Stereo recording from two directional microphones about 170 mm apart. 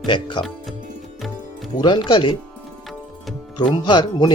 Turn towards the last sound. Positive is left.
turn(degrees=25)  # may be behind; listen again after turning